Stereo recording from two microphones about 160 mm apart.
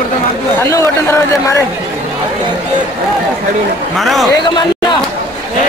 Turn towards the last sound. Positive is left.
turn(degrees=30)  # may be behind; listen again after turning